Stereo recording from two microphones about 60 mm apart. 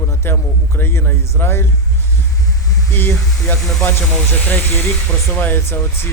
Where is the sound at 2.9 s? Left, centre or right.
Left.